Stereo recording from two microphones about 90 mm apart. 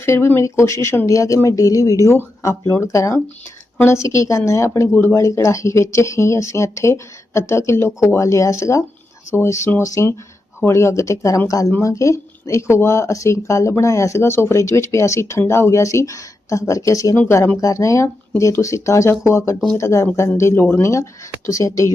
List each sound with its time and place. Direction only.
0.0 s speech: 30° left (ahead or behind)